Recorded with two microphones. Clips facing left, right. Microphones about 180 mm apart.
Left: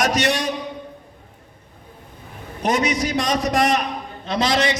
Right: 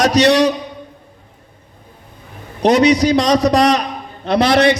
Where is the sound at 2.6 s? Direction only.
70° right (ahead or behind).